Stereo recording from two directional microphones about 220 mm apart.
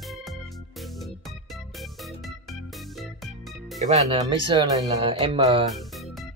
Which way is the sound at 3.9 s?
25° right (ahead or behind).